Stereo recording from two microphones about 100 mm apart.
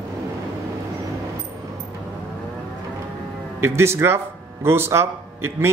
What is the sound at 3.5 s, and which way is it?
Speech, 25° right (ahead or behind).